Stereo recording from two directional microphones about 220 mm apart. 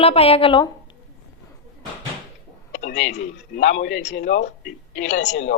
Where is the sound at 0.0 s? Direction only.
25° left (ahead or behind).